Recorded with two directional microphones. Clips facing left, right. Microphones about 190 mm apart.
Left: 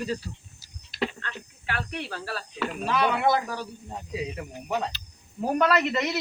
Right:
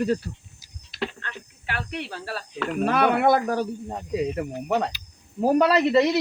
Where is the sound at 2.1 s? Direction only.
25° right (ahead or behind).